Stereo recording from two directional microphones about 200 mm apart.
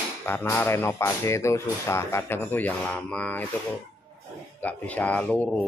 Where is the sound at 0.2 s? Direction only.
10° left (ahead or behind).